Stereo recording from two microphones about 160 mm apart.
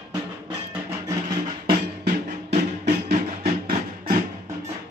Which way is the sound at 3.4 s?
60° right (ahead or behind).